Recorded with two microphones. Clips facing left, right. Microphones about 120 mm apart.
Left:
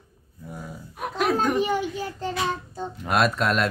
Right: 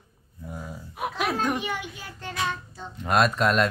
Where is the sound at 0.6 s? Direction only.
5° right (ahead or behind).